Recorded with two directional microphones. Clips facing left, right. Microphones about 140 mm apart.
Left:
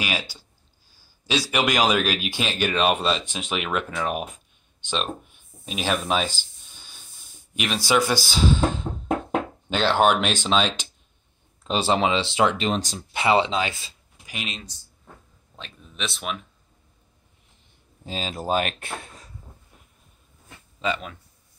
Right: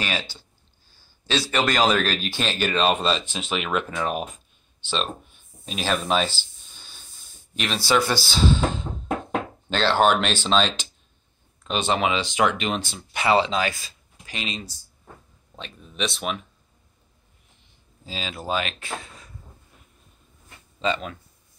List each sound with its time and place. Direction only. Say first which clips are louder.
0.0 s speech: even; 10° left (ahead or behind)
5.7 s speech: right 1 dB; 5° left (ahead or behind)
11.6 s speech: left 2 dB; 30° left (ahead or behind)
13.1 s speech: even; 25° left (ahead or behind)
14.2 s speech: right 2 dB; 5° left (ahead or behind)
18.0 s speech: left 3 dB; 45° left (ahead or behind)
20.8 s speech: right 2 dB; 10° left (ahead or behind)